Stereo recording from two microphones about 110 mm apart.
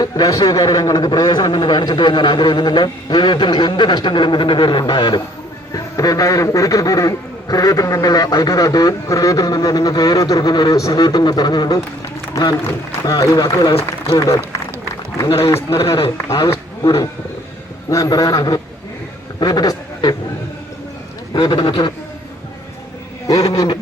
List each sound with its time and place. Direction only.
0.0 s a man's voice: 35° left (ahead or behind)
13.1 s a man's voice: 35° left (ahead or behind)
16.1 s a man's voice: 25° left (ahead or behind)
21.4 s a man's voice: 40° left (ahead or behind)
21.7 s a man's voice: 55° left (ahead or behind)
23.5 s a man's voice: 30° left (ahead or behind)